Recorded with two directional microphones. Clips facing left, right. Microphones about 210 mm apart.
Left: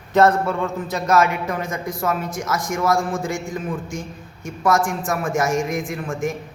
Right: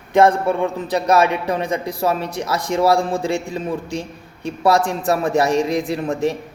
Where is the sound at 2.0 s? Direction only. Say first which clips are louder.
Right 1 dB; 30° right (ahead or behind).